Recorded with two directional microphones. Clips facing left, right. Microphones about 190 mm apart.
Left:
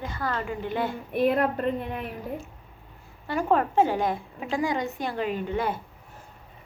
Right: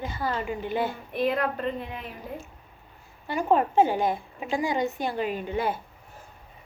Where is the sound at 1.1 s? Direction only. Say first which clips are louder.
Left 4 dB; 55° left (ahead or behind).